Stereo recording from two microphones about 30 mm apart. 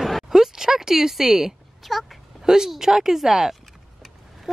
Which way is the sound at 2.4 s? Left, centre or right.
Centre.